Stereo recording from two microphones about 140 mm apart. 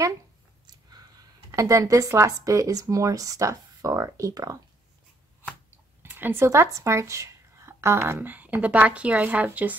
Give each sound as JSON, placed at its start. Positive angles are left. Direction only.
{"t": 1.5, "sound": "speech", "side_deg": -20}
{"t": 6.0, "sound": "speech", "side_deg": -15}